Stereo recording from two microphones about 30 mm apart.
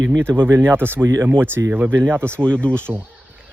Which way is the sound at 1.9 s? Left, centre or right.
Left.